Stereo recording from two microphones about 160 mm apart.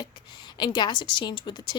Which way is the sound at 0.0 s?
30° left (ahead or behind).